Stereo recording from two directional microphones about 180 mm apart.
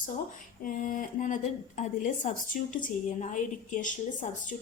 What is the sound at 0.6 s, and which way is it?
A woman's voice, 45° left (ahead or behind).